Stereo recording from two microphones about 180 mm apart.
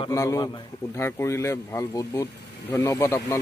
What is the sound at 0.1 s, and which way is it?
Speech, 15° left (ahead or behind).